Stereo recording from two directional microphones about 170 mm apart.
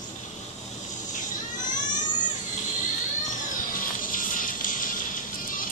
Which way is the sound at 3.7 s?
55° left (ahead or behind).